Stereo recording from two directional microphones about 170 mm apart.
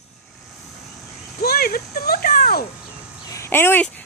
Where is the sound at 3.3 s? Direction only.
15° left (ahead or behind).